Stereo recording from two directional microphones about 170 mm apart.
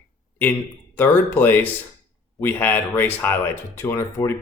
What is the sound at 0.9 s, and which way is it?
Speech, 10° left (ahead or behind).